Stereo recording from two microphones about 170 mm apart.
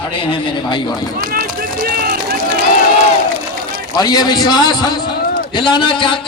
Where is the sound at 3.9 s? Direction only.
25° left (ahead or behind).